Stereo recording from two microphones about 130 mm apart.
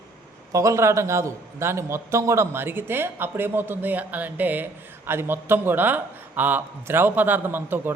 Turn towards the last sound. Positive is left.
turn(degrees=-15)  # may be behind; listen again after turning